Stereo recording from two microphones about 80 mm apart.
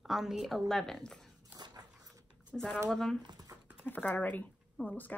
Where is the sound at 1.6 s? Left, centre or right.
Right.